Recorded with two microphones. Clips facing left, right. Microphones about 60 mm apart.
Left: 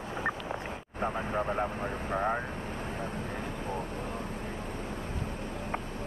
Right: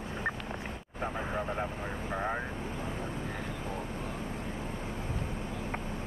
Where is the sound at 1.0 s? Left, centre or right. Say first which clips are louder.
Left 3 dB; centre.